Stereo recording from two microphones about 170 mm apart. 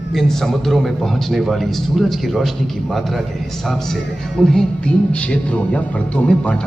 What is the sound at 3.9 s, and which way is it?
Music, centre (ahead or behind).